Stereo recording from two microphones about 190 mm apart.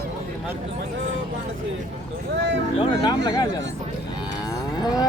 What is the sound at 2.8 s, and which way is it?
Speech, 25° left (ahead or behind).